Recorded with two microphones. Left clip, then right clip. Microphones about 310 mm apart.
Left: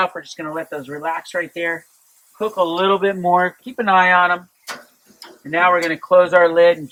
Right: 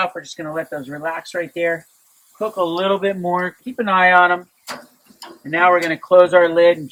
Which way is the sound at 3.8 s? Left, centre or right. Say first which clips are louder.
Right 1 dB; centre.